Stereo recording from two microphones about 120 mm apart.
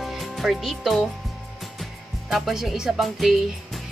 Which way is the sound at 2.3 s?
Centre (ahead or behind).